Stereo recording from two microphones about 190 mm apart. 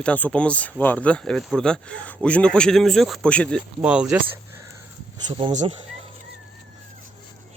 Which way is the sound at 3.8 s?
5° right (ahead or behind).